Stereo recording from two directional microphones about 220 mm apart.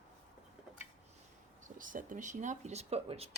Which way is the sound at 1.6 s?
35° right (ahead or behind).